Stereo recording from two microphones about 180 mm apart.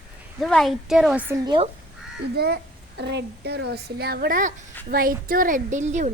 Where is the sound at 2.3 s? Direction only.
65° right (ahead or behind); by 6.1 s 40° right (ahead or behind).